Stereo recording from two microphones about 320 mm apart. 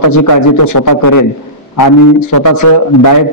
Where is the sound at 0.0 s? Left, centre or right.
Left.